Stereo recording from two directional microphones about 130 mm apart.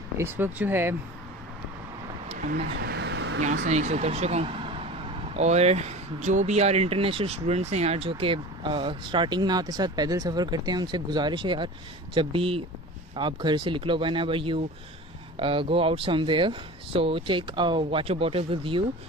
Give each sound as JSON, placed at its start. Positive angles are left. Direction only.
{"t": 0.2, "sound": "speech", "side_deg": -15}
{"t": 3.4, "sound": "speech", "side_deg": -65}